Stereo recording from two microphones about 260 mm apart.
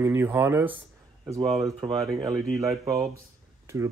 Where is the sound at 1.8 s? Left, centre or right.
Centre.